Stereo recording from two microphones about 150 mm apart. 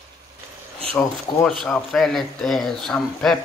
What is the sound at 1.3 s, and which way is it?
Speech, 30° left (ahead or behind).